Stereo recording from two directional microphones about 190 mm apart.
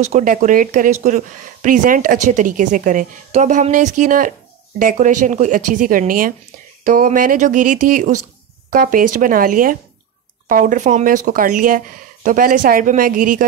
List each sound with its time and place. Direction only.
0.0 s speech: 45° right (ahead or behind)